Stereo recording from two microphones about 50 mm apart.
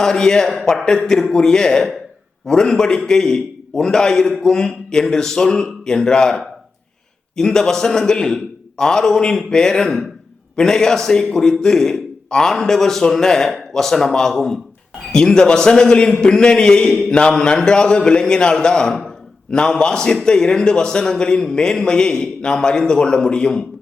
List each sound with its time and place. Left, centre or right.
0.0 s a man's voice: centre
17.1 s mantra: centre
17.3 s a man's voice: centre
19.0 s a sound: centre
19.8 s a man's voice: centre